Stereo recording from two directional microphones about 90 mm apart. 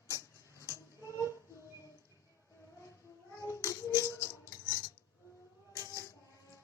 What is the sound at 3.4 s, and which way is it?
Child singing, 35° left (ahead or behind).